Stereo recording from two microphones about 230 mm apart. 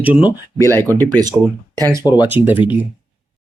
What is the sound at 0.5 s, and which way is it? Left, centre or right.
Speech, centre.